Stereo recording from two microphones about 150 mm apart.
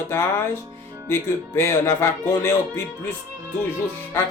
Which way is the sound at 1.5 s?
15° left (ahead or behind).